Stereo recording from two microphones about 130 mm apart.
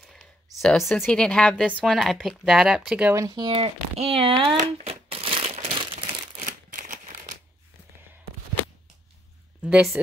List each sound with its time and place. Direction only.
0.0 s a sound: 5° left (ahead or behind)
1.0 s speech: 5° left (ahead or behind)
3.1 s speech: 25° right (ahead or behind); by 4.5 s 45° right (ahead or behind)
4.6 s crumpling: 55° right (ahead or behind)
6.4 s scissors: 85° right
9.6 s speech: 5° right (ahead or behind)